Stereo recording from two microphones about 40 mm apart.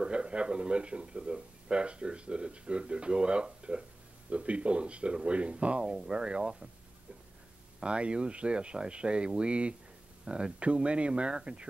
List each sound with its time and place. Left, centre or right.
0.0 s speech: right
7.8 s speech: right